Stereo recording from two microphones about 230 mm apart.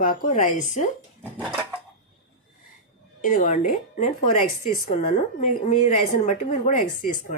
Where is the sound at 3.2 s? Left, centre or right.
Left.